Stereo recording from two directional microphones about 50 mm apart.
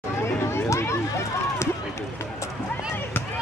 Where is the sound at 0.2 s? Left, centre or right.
Left.